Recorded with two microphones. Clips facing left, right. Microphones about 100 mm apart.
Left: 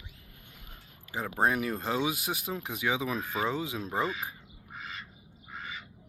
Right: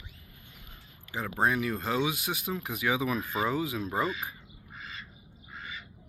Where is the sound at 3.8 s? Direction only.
Centre (ahead or behind).